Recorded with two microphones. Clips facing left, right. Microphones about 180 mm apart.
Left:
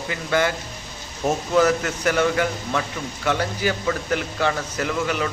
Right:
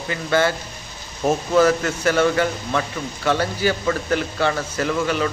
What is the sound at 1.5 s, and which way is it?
Speech, 10° left (ahead or behind).